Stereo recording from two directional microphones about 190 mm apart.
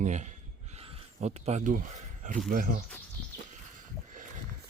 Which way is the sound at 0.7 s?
35° right (ahead or behind).